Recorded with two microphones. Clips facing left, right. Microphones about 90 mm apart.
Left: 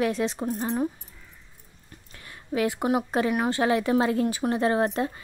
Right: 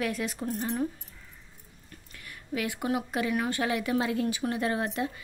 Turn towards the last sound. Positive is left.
turn(degrees=40)  # may be behind; listen again after turning